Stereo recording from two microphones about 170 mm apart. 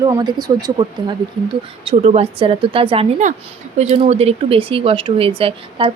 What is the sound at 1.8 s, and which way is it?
Speech, 35° right (ahead or behind).